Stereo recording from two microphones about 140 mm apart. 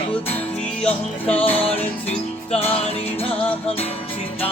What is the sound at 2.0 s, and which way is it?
Music, 45° left (ahead or behind).